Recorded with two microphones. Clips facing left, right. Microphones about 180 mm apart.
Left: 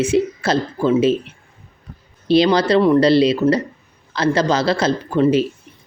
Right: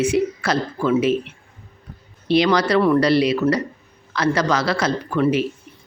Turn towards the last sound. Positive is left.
turn(degrees=25)  # may be behind; listen again after turning